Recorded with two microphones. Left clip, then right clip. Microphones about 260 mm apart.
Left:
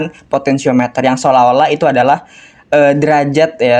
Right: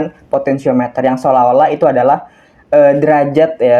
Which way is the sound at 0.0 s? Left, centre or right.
Left.